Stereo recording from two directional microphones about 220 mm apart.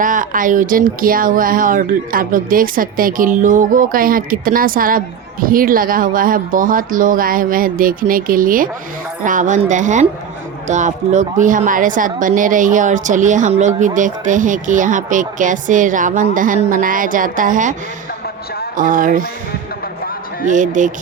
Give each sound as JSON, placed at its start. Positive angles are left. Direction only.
{"t": 0.0, "sound": "speech", "side_deg": -35}
{"t": 18.8, "sound": "speech", "side_deg": -40}
{"t": 20.5, "sound": "speech", "side_deg": -35}